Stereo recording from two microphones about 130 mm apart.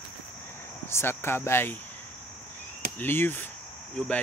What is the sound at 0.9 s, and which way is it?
Speech, 20° left (ahead or behind).